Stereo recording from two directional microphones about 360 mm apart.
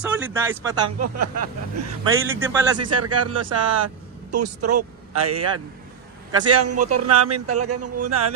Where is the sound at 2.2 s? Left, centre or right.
Centre.